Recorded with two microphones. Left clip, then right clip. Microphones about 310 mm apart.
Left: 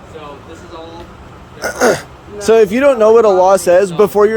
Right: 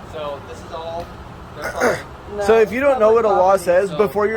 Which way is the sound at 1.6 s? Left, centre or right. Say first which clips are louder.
Left 6 dB; left.